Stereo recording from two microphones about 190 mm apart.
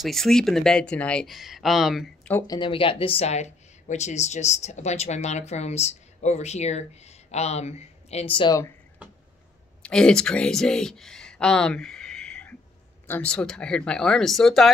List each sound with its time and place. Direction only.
0.0 s speech: centre (ahead or behind)
2.3 s speech: 20° left (ahead or behind)
9.8 s speech: 5° left (ahead or behind)